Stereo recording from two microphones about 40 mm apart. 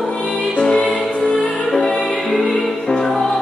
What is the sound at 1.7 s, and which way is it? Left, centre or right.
Music, centre.